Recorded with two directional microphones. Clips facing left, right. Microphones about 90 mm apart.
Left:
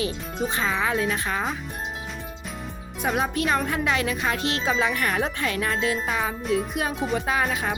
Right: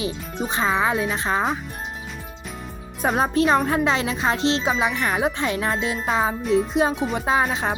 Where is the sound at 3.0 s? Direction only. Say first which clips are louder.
Right 5 dB; 35° right (ahead or behind).